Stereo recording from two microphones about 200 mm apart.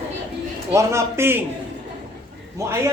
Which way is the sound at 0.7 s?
15° right (ahead or behind).